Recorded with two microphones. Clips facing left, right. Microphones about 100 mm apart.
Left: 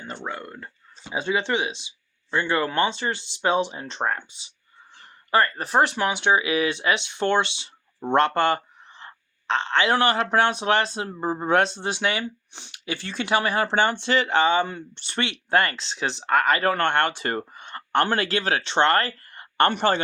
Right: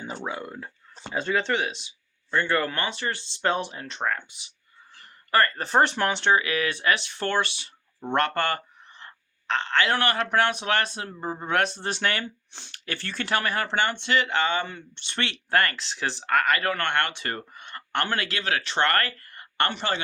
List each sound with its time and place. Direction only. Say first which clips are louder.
0.0 s speech: right 1 dB; 10° right (ahead or behind)
1.1 s speech: left 1 dB; 15° left (ahead or behind)
4.9 s speech: left 1 dB; 15° left (ahead or behind)
11.8 s speech: left 2 dB; 15° left (ahead or behind)
13.7 s speech: left 3 dB; 35° left (ahead or behind)
15.2 s speech: left 2 dB; 20° left (ahead or behind)
19.6 s speech: left 7 dB; 45° left (ahead or behind)